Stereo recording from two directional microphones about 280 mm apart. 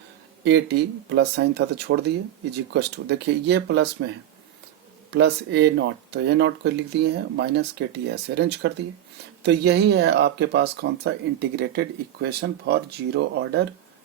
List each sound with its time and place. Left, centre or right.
0.4 s speech: right
5.1 s speech: right